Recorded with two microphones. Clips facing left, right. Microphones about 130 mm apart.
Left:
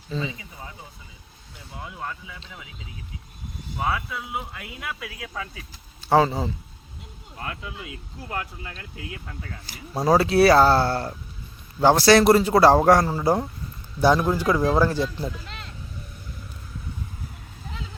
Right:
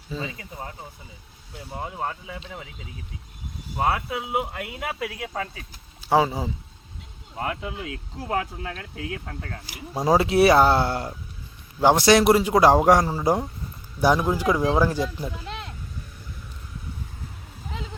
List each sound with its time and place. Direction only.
0.1 s speech: 10° right (ahead or behind)
1.7 s speech: 45° right (ahead or behind)
3.8 s speech: 55° right (ahead or behind)
6.0 s speech: 10° right (ahead or behind)
7.3 s speech: 30° right (ahead or behind)
8.3 s speech: 90° right; by 9.6 s 55° right (ahead or behind)
9.6 s speech: 15° right (ahead or behind)